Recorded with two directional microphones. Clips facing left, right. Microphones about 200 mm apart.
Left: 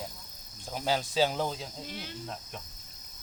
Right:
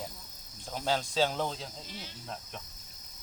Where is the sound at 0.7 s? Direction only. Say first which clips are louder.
Left 1 dB; 5° left (ahead or behind).